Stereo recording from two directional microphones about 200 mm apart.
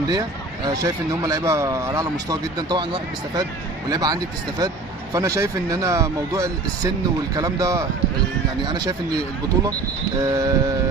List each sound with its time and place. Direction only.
0.1 s speech: 20° right (ahead or behind)
10.2 s speech: 15° right (ahead or behind)